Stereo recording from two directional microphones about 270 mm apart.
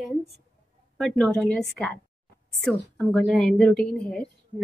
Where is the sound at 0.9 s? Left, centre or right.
Centre.